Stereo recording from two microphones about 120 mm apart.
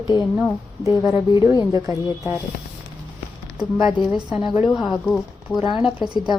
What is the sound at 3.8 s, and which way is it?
Speech, 50° left (ahead or behind).